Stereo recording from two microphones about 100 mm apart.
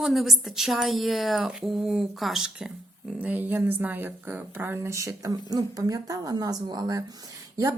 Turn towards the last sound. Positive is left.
turn(degrees=-35)  # may be behind; listen again after turning